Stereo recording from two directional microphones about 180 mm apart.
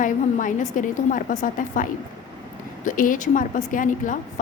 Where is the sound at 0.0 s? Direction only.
45° left (ahead or behind).